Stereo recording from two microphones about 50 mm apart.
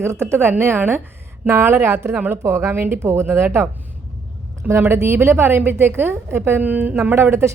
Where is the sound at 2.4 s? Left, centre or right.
Right.